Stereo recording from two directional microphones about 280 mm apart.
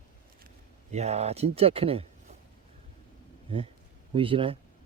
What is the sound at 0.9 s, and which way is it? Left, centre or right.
Speech, right.